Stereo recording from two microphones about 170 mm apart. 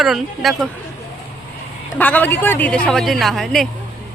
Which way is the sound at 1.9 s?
10° left (ahead or behind).